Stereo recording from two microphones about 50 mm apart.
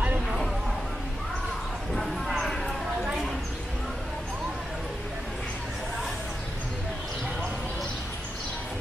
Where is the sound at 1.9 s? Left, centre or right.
Centre.